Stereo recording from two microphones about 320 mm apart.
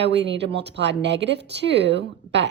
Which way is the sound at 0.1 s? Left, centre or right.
Right.